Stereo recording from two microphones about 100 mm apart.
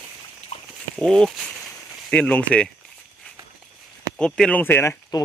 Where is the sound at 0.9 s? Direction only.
5° left (ahead or behind).